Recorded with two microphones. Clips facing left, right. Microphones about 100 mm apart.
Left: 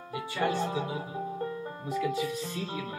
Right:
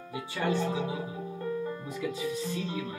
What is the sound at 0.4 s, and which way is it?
Speech, 40° left (ahead or behind).